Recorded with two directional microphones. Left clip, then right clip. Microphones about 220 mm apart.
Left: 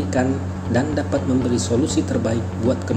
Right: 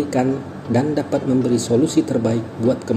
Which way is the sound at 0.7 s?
40° right (ahead or behind).